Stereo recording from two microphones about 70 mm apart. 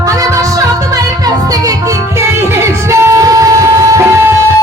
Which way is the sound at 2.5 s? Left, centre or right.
Right.